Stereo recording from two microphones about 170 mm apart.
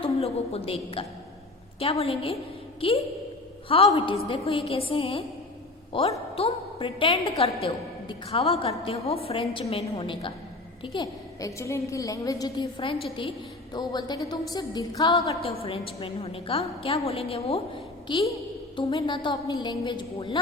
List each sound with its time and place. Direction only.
0.0 s a woman's voice: 35° left (ahead or behind)
3.7 s a woman's voice: 35° left (ahead or behind)
15.6 s a woman's voice: 35° left (ahead or behind)